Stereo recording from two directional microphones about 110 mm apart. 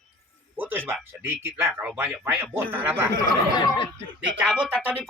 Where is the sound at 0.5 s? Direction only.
20° right (ahead or behind).